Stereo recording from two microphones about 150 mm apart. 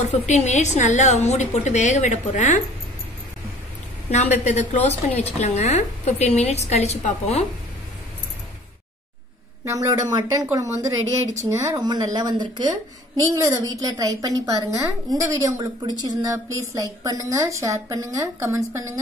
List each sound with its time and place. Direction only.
0.0 s a woman's voice: 50° left (ahead or behind)
4.1 s a woman's voice: 50° left (ahead or behind)
9.7 s speech: 20° right (ahead or behind)